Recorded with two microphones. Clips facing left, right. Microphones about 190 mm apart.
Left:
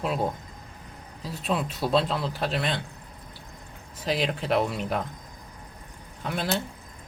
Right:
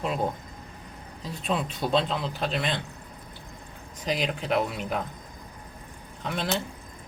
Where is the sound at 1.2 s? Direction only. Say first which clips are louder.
Left 1 dB; 5° left (ahead or behind).